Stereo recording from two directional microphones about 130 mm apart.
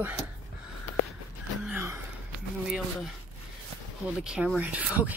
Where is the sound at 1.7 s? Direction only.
20° right (ahead or behind).